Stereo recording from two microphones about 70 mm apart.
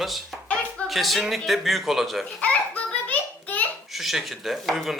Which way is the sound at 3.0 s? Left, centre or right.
Left.